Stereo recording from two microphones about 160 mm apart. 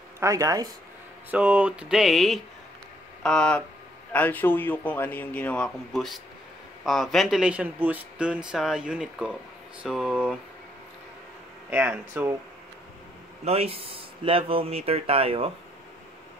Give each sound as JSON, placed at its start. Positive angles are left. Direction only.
{"t": 0.2, "sound": "speech", "side_deg": -20}
{"t": 1.3, "sound": "a man's voice", "side_deg": -5}
{"t": 11.7, "sound": "speech", "side_deg": -10}
{"t": 13.5, "sound": "speech", "side_deg": -35}